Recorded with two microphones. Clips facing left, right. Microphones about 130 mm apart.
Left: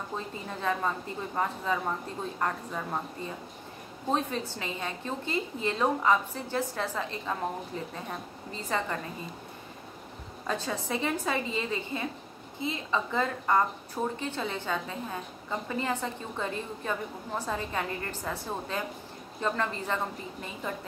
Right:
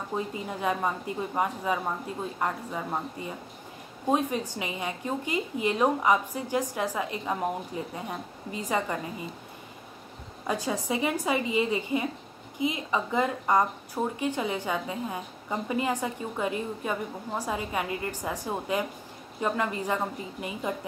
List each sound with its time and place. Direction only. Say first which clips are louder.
0.1 s a woman's voice: right 4 dB; 15° right (ahead or behind)
10.4 s a woman's voice: right 3 dB; 15° right (ahead or behind)